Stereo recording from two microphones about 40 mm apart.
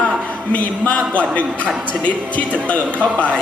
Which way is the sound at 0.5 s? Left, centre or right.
Left.